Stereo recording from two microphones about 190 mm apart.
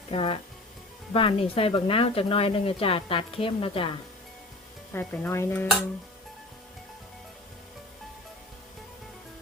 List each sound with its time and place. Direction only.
0.1 s speech: 30° left (ahead or behind)
4.9 s speech: 10° left (ahead or behind)